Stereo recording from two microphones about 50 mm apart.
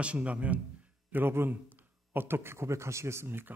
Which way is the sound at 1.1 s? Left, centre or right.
Right.